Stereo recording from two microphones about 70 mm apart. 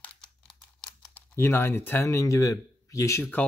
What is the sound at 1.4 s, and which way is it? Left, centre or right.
Speech, left.